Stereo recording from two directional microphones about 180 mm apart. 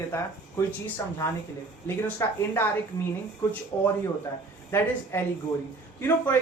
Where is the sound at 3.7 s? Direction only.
25° left (ahead or behind).